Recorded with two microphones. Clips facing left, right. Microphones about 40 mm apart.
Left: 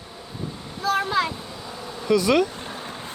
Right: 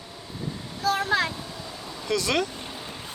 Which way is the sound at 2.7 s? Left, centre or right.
Left.